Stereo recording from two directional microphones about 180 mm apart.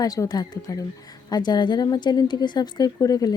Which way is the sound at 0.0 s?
20° left (ahead or behind).